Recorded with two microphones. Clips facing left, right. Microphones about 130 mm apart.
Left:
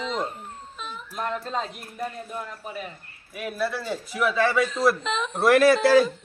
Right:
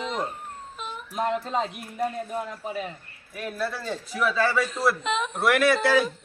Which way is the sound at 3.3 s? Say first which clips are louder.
Left 2 dB; 10° left (ahead or behind).